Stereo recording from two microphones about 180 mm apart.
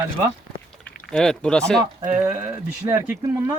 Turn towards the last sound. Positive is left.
turn(degrees=-15)  # may be behind; listen again after turning